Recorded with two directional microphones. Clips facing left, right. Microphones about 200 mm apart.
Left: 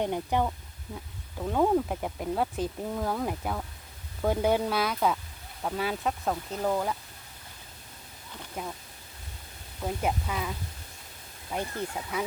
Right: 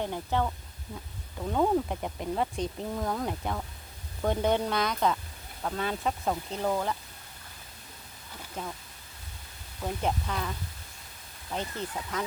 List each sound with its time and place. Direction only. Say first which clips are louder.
0.0 s speech: left 2 dB; 15° left (ahead or behind)
1.4 s speech: left 1 dB; 5° left (ahead or behind)
8.6 s speech: left 1 dB; 10° left (ahead or behind)
9.8 s speech: left 1 dB; 5° left (ahead or behind)
11.5 s speech: left 2 dB; 10° left (ahead or behind)